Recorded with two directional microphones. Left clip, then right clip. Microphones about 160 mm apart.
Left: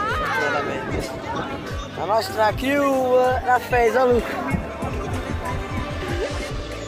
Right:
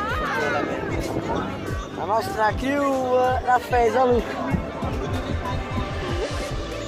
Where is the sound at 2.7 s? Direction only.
50° left (ahead or behind).